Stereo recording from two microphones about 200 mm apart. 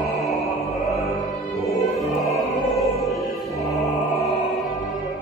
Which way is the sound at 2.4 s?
Centre (ahead or behind).